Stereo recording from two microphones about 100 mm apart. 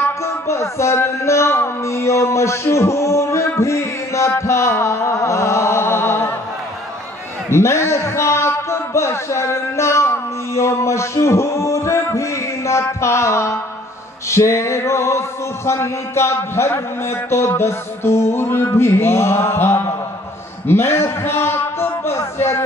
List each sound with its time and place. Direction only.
0.2 s music: 30° left (ahead or behind)
7.4 s a sound: 25° left (ahead or behind)
20.6 s a man's voice: 25° left (ahead or behind)